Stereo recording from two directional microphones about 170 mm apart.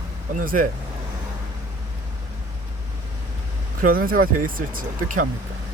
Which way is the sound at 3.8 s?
55° right (ahead or behind).